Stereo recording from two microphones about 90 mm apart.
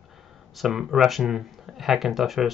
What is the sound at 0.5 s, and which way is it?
Speech, 5° right (ahead or behind).